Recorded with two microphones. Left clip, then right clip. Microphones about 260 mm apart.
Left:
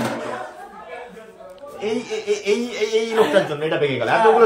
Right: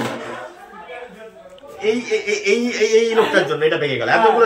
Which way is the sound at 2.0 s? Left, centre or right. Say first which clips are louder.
Right 4 dB; left.